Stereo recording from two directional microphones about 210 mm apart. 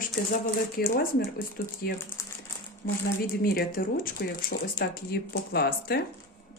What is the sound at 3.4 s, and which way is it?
A woman's voice, 45° left (ahead or behind).